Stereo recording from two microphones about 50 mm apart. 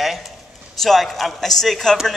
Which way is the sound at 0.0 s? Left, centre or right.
Centre.